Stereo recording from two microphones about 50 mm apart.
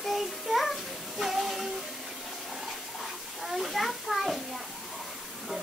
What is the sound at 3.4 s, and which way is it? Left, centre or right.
Children playing, centre.